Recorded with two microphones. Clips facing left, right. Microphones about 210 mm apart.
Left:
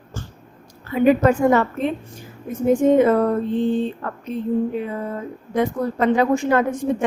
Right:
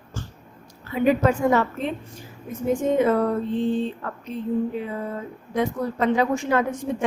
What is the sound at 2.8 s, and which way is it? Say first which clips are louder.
Speech: left 8 dB; 55° left (ahead or behind).